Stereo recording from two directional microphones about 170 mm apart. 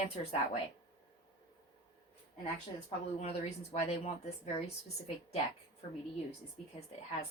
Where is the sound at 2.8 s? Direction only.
40° left (ahead or behind).